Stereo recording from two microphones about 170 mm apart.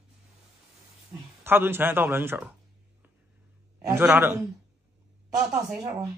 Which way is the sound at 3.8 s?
15° right (ahead or behind).